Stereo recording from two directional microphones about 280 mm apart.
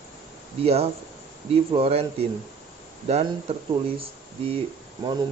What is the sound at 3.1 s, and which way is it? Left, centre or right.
Speech, right.